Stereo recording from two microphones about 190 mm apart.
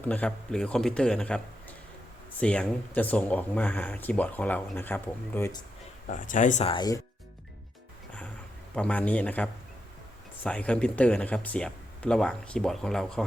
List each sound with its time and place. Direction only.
0.0 s speech: 5° left (ahead or behind)
6.1 s speech: 40° left (ahead or behind)
6.7 s speech: 20° left (ahead or behind)
8.7 s speech: 5° left (ahead or behind)